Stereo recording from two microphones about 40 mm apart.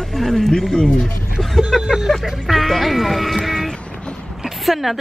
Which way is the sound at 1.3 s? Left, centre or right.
Centre.